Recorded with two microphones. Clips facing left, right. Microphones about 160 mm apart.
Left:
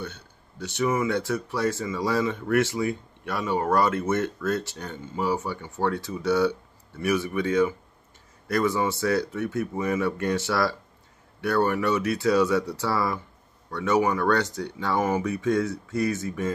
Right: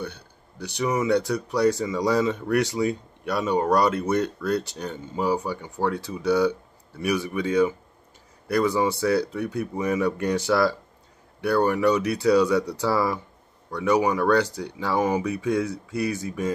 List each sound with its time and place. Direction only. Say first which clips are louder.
0.0 s speech: right 2 dB; 15° right (ahead or behind)
11.5 s speech: right 3 dB; 15° right (ahead or behind)